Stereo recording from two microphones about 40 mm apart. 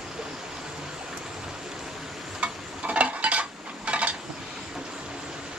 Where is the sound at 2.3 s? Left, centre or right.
Right.